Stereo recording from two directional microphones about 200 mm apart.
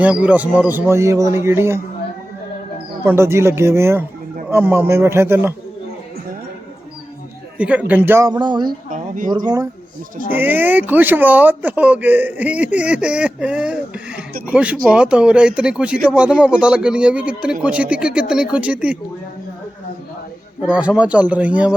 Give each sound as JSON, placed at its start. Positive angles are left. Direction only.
{"t": 0.0, "sound": "speech", "side_deg": -5}
{"t": 3.0, "sound": "speech", "side_deg": -10}
{"t": 7.6, "sound": "speech", "side_deg": -5}
{"t": 8.9, "sound": "speech", "side_deg": -40}
{"t": 9.3, "sound": "speech", "side_deg": -20}
{"t": 10.3, "sound": "speech", "side_deg": -10}
{"t": 20.6, "sound": "speech", "side_deg": -5}